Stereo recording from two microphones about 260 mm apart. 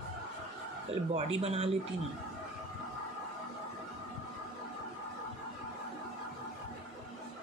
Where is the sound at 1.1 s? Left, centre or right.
Right.